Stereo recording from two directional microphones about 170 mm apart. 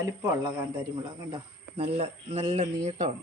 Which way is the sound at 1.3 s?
35° right (ahead or behind).